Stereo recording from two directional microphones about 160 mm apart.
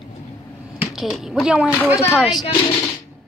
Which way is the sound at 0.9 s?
Centre (ahead or behind).